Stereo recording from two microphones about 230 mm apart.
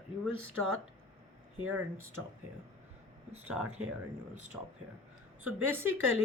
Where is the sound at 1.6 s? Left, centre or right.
Right.